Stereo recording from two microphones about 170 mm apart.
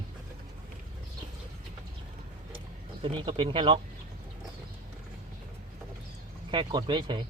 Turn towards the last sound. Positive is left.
turn(degrees=-30)  # may be behind; listen again after turning